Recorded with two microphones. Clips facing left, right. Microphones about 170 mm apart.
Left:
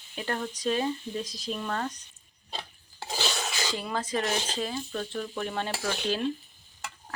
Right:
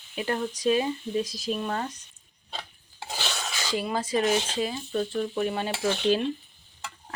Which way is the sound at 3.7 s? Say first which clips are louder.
Right 6 dB; 10° right (ahead or behind).